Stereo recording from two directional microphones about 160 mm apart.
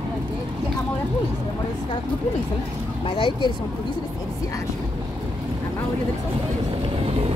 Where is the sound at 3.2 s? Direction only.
30° left (ahead or behind).